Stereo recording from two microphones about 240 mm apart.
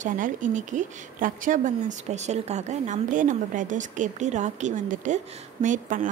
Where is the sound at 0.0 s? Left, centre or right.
Right.